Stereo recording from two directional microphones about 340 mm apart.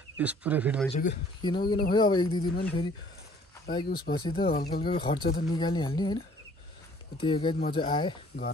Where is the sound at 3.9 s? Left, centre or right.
Left.